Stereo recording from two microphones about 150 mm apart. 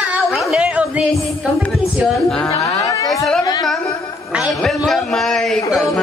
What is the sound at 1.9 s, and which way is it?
Speech, 5° left (ahead or behind).